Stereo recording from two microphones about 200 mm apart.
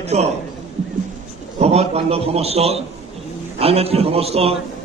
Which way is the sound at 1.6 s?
30° right (ahead or behind).